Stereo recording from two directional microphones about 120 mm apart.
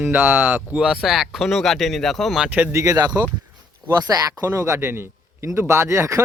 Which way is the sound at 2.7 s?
30° right (ahead or behind).